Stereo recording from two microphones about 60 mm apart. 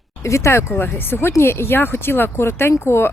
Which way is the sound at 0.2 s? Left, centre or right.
Left.